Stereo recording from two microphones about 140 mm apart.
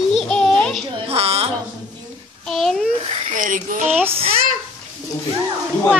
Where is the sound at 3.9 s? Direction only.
15° right (ahead or behind).